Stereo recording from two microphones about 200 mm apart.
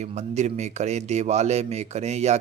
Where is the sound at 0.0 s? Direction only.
35° right (ahead or behind).